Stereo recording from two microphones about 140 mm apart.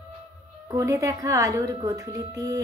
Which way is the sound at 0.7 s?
20° right (ahead or behind).